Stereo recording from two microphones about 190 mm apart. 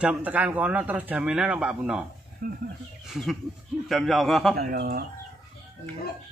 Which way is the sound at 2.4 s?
45° right (ahead or behind).